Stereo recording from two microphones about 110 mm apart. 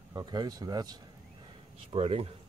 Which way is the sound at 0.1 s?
35° right (ahead or behind).